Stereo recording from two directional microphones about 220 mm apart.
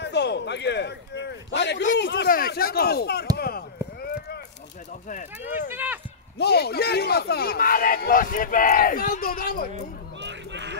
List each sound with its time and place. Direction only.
0.0 s a man's voice: 50° left (ahead or behind)
5.7 s speech: 10° right (ahead or behind)
6.3 s a man's voice: 50° left (ahead or behind)
10.2 s a sound: 55° right (ahead or behind)